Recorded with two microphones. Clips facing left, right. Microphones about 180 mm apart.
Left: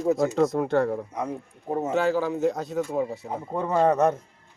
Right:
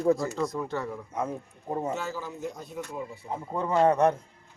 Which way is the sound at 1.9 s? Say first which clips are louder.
Left 10 dB; 75° left (ahead or behind).